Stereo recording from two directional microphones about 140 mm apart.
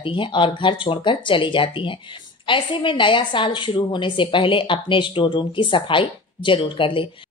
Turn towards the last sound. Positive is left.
turn(degrees=40)  # may be behind; listen again after turning